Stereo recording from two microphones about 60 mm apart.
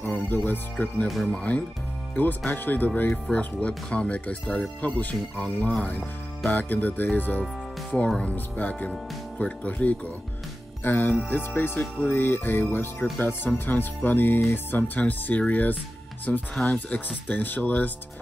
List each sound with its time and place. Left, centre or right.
0.0 s speech: left
1.0 s speech: centre
1.3 s speech: left
13.0 s speech: centre
13.4 s speech: left